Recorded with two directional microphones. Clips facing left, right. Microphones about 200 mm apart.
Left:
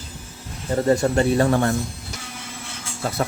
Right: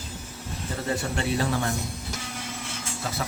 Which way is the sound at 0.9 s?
45° left (ahead or behind).